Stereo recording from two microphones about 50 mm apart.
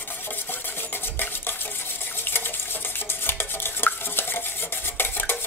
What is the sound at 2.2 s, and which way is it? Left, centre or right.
Stir, left.